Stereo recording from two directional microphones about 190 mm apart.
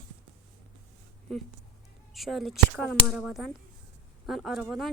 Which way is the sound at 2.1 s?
Centre (ahead or behind).